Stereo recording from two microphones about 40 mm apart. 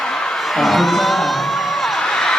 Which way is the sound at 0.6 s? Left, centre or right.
Centre.